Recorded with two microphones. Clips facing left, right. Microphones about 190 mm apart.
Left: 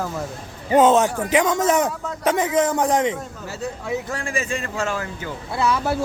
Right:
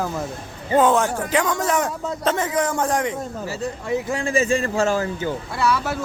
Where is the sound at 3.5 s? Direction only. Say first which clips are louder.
Right 1 dB; centre (ahead or behind).